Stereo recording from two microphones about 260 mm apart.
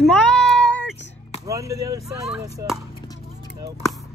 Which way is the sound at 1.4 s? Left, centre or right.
Centre.